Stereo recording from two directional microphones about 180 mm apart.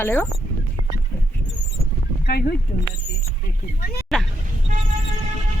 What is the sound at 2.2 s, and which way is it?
Speech, 60° left (ahead or behind).